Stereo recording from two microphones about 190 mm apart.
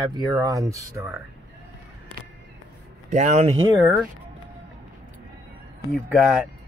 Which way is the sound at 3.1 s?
35° right (ahead or behind).